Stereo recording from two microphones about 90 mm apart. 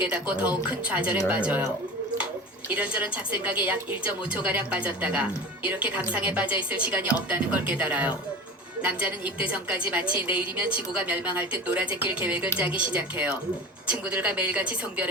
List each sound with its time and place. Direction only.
0.1 s a woman's voice: 15° right (ahead or behind)
2.7 s a woman's voice: 15° right (ahead or behind)
10.0 s a woman's voice: 70° left (ahead or behind)
10.2 s a woman's voice: 15° right (ahead or behind)